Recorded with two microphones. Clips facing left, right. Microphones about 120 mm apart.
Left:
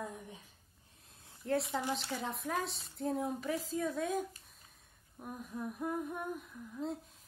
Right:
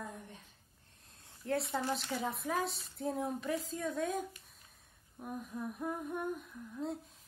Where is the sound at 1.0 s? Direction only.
Centre (ahead or behind).